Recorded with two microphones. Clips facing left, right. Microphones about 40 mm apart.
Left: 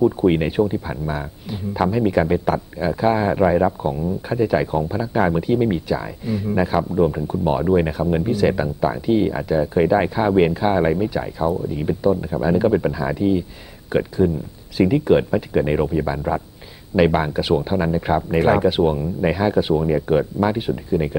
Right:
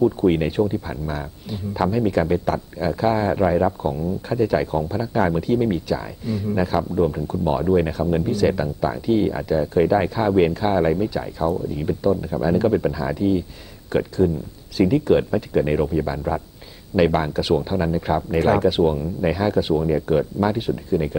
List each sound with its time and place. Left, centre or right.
0.0 s speech: centre